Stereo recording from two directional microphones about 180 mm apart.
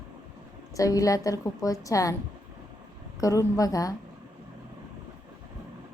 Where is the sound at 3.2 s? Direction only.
20° left (ahead or behind).